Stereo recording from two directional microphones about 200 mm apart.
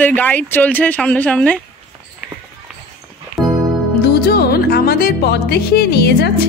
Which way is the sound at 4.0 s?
55° left (ahead or behind).